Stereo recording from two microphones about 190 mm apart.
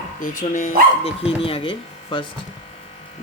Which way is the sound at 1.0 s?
30° left (ahead or behind).